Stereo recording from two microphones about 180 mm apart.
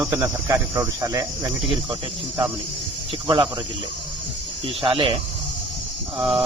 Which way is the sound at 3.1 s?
30° right (ahead or behind).